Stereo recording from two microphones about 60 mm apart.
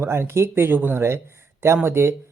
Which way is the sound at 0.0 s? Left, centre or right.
Right.